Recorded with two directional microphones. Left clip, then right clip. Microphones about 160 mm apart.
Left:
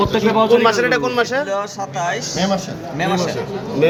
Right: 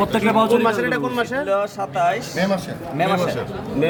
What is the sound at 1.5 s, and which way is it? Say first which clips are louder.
Speech: right 1 dB; 70° right (ahead or behind).